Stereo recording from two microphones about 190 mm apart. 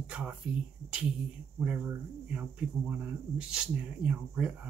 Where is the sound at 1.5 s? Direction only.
5° right (ahead or behind).